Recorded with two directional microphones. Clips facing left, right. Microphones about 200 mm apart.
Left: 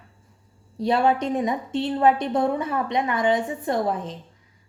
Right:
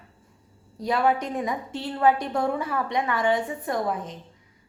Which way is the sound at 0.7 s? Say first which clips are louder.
Left 3 dB; 25° left (ahead or behind).